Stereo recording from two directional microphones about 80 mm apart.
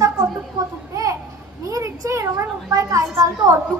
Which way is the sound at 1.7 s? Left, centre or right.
Right.